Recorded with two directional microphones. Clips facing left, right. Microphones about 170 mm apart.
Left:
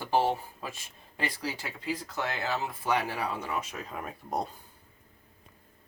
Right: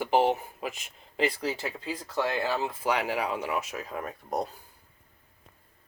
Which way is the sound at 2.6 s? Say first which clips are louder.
Right 2 dB; 20° right (ahead or behind).